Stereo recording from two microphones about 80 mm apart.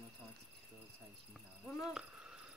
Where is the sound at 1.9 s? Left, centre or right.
Centre.